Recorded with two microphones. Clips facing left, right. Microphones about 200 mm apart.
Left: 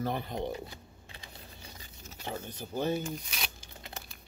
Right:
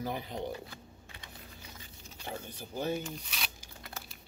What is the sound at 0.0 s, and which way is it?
Speech, 10° right (ahead or behind).